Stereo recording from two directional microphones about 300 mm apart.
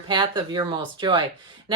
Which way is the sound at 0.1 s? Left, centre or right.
Centre.